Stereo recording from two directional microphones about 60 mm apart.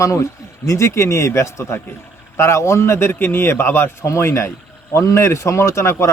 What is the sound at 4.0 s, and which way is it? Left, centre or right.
A man's voice, left.